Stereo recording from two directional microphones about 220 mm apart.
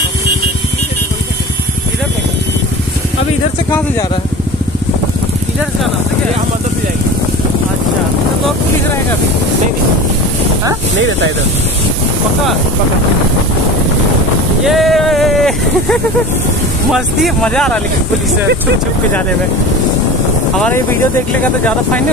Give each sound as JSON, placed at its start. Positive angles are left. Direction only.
{"t": 11.0, "sound": "speech", "side_deg": -60}
{"t": 14.6, "sound": "speech", "side_deg": 0}
{"t": 20.5, "sound": "speech", "side_deg": 5}